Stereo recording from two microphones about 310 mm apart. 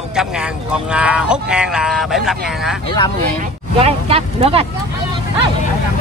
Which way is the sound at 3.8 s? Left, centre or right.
Centre.